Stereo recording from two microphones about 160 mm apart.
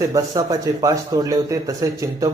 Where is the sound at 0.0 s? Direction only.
20° right (ahead or behind).